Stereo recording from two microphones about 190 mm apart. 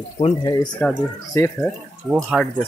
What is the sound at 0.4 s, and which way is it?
Speech, 20° left (ahead or behind).